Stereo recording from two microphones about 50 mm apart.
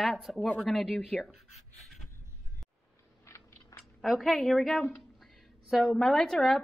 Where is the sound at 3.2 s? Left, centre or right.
Left.